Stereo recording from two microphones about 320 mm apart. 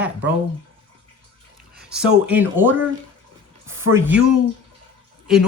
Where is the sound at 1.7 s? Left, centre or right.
Centre.